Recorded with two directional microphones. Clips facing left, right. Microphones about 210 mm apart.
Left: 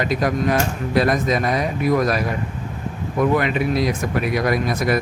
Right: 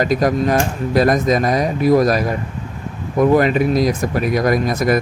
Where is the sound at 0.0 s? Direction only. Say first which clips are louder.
Right 4 dB; 40° right (ahead or behind).